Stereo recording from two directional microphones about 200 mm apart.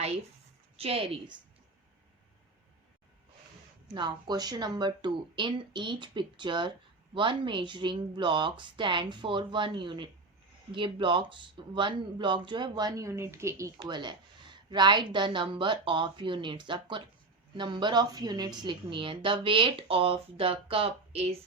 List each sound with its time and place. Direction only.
0.8 s speech: 30° right (ahead or behind)
3.9 s speech: 20° right (ahead or behind)